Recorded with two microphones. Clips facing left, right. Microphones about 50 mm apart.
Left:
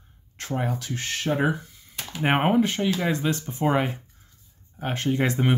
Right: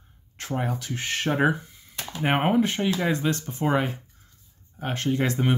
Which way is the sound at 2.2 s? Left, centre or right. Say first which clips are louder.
Left 1 dB; centre.